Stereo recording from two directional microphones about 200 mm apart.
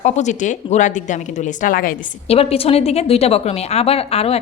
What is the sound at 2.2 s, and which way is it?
A woman's voice, 30° left (ahead or behind).